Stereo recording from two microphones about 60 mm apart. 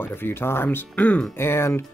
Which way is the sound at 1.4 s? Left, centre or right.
Left.